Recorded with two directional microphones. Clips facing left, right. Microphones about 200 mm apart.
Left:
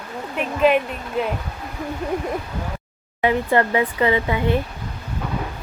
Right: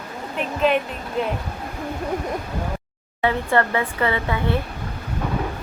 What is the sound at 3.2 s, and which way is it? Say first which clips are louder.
Speech: left 2 dB; 15° left (ahead or behind).